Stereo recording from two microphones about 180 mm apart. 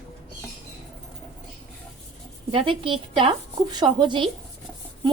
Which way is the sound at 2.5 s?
30° right (ahead or behind).